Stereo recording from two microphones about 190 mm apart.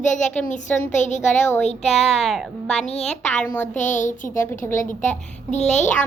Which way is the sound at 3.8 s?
40° left (ahead or behind).